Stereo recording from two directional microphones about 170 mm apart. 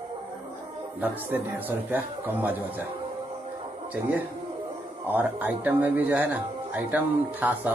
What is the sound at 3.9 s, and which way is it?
Speech, 10° right (ahead or behind).